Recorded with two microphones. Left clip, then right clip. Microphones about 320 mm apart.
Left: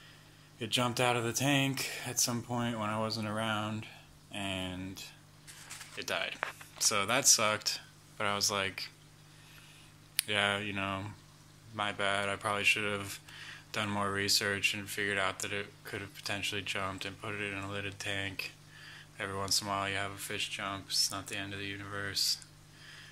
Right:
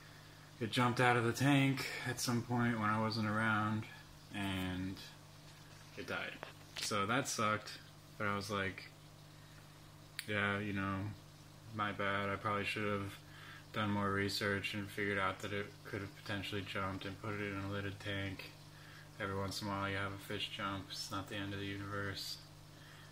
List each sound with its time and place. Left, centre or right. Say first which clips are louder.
0.6 s speech: left 3 dB; centre
6.4 s speech: left 13 dB; left
6.9 s speech: left 9 dB; centre
10.1 s speech: left 7 dB; centre